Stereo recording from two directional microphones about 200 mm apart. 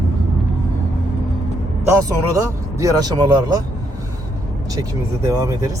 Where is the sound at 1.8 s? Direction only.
15° right (ahead or behind).